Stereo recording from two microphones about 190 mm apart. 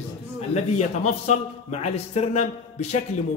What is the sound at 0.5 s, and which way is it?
A man's voice, 35° left (ahead or behind).